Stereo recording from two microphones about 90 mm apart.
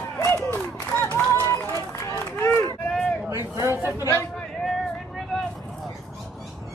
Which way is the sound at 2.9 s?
5° left (ahead or behind).